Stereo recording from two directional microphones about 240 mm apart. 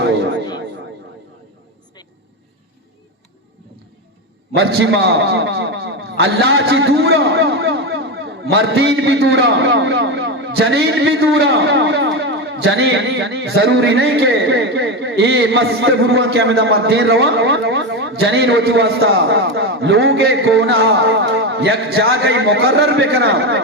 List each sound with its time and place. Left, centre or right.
0.0 s a sound: right
4.5 s a man's voice: right
19.2 s a man's voice: right
20.9 s a man's voice: right